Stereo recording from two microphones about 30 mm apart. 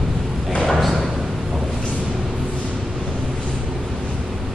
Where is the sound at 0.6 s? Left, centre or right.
Centre.